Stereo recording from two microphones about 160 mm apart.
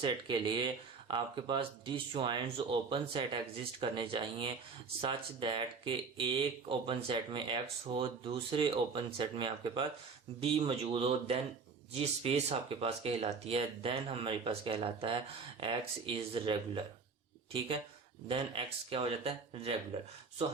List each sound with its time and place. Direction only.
0.0 s speech: 30° right (ahead or behind)
18.3 s speech: 35° right (ahead or behind)